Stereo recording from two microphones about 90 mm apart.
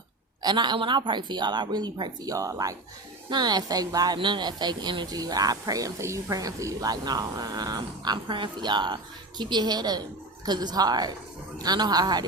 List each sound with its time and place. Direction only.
0.4 s a woman's voice: 55° right (ahead or behind); by 2.7 s 40° right (ahead or behind)
3.2 s speech: 50° right (ahead or behind)
4.2 s a woman's voice: 55° right (ahead or behind)
5.2 s speech: 45° right (ahead or behind)